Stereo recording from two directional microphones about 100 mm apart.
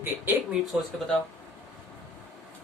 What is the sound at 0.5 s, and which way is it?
Speech, 5° right (ahead or behind).